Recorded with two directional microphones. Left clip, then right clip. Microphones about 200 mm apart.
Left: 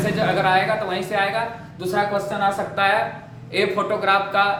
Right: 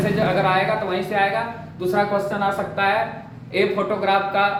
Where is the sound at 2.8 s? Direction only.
30° left (ahead or behind).